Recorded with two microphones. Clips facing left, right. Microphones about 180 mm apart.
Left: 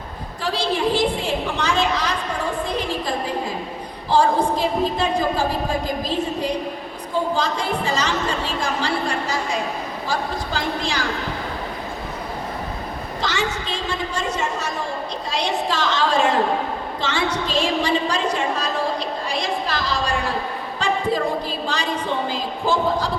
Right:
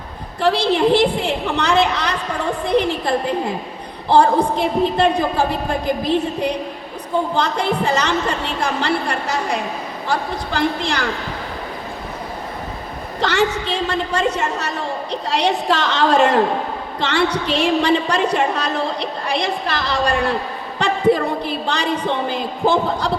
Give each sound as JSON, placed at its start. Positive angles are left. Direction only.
{"t": 0.4, "sound": "a woman's voice", "side_deg": -65}
{"t": 13.2, "sound": "a woman's voice", "side_deg": -65}